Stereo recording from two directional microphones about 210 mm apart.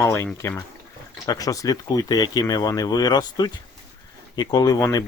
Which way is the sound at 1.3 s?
15° left (ahead or behind).